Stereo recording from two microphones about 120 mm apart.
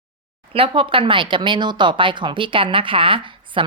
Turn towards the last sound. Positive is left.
turn(degrees=-45)  # may be behind; listen again after turning